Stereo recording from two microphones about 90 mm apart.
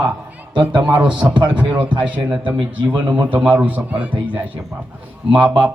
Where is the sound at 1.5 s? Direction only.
15° right (ahead or behind).